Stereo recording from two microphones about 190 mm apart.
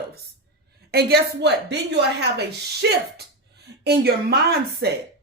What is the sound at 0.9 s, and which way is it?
Speech, 55° right (ahead or behind).